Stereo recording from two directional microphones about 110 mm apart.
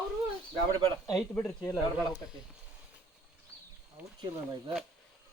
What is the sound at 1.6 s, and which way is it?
Speech, 25° left (ahead or behind).